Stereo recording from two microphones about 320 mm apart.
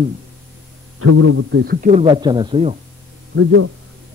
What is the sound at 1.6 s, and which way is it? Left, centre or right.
Speech, right.